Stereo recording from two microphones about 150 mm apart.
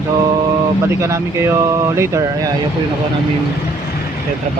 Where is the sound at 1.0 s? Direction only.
20° right (ahead or behind).